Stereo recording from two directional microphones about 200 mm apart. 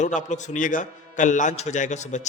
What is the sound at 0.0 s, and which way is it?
Speech, 40° left (ahead or behind).